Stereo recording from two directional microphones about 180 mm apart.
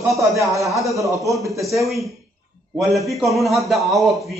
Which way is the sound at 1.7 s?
Centre (ahead or behind).